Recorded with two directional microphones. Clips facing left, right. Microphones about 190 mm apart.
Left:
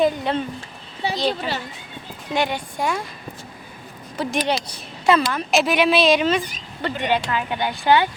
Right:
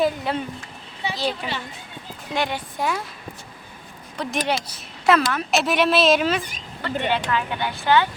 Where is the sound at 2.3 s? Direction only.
Centre (ahead or behind).